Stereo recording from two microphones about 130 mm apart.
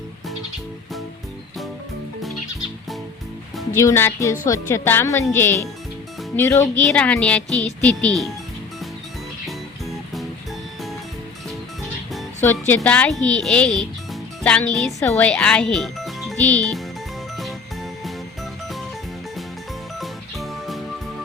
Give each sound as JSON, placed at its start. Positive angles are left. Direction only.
{"t": 3.8, "sound": "speech", "side_deg": 20}
{"t": 6.9, "sound": "a woman's voice", "side_deg": 10}
{"t": 9.5, "sound": "music", "side_deg": 0}
{"t": 12.4, "sound": "speech", "side_deg": 15}
{"t": 16.4, "sound": "a woman's voice", "side_deg": 15}
{"t": 20.0, "sound": "music", "side_deg": 0}